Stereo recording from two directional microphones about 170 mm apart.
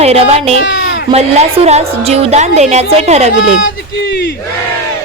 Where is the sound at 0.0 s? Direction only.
35° right (ahead or behind).